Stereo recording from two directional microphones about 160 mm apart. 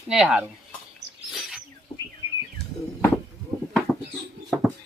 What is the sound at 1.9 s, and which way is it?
Bird, 25° left (ahead or behind).